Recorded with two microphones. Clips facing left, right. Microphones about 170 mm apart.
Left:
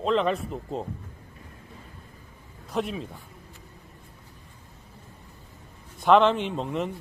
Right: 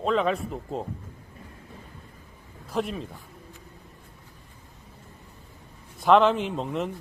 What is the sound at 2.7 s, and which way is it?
Speech, centre (ahead or behind).